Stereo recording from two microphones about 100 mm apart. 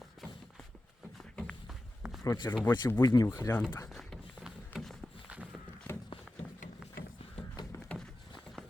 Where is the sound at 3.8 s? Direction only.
5° left (ahead or behind).